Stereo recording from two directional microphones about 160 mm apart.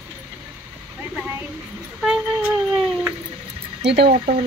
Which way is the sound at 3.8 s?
90° right.